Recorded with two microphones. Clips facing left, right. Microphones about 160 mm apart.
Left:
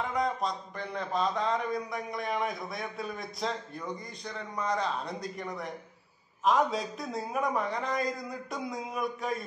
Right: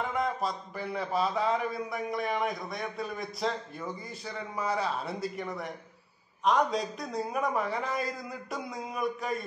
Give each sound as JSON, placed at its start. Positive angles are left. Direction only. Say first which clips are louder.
{"t": 0.1, "sound": "a man's voice", "louder": "even", "side_deg": -5}